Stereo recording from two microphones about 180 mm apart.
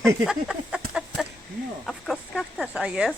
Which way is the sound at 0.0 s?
5° right (ahead or behind).